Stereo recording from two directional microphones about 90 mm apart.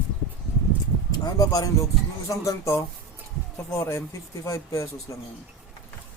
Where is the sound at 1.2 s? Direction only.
40° left (ahead or behind).